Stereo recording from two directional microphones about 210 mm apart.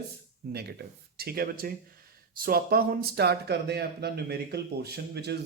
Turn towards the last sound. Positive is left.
turn(degrees=-50)  # may be behind; listen again after turning